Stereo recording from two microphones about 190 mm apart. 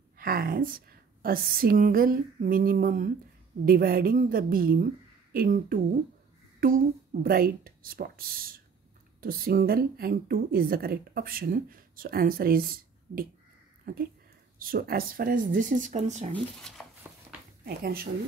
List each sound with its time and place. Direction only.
0.2 s a woman's voice: 50° right (ahead or behind)
16.8 s a sound: centre (ahead or behind)
17.6 s a woman's voice: 50° right (ahead or behind)